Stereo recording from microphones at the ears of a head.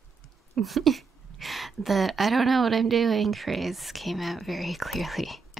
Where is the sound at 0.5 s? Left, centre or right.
Right.